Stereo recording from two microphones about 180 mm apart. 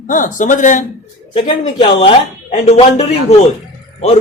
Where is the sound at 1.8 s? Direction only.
30° left (ahead or behind).